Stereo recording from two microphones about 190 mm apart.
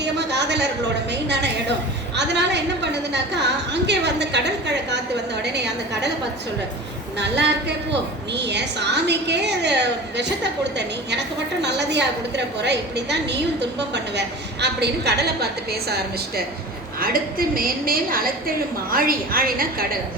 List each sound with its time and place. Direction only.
0.0 s a sound: 65° right (ahead or behind)
1.1 s a woman's voice: 65° right (ahead or behind)
7.2 s a woman's voice: 65° right (ahead or behind)